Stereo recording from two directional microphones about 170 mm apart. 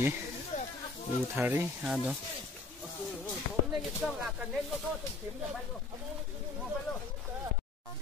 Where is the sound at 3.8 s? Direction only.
5° right (ahead or behind).